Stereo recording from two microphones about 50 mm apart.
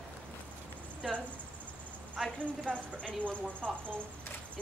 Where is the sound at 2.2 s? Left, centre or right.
Centre.